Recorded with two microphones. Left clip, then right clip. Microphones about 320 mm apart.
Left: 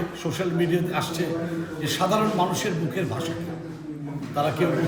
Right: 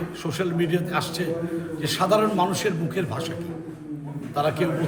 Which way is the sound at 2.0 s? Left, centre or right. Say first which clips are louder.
Right 2 dB; centre.